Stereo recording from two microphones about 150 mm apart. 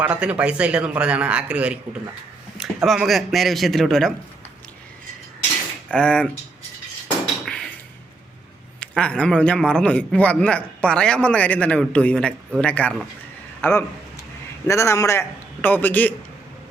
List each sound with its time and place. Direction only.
0.0 s a man's voice: 10° right (ahead or behind)
5.9 s a man's voice: 5° left (ahead or behind)
7.4 s a sound: 5° left (ahead or behind)
8.8 s a man's voice: 5° left (ahead or behind)